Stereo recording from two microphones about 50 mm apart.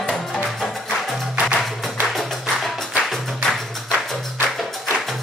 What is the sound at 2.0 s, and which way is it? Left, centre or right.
Music, centre.